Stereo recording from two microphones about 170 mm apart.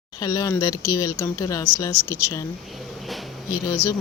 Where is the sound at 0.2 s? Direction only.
20° left (ahead or behind).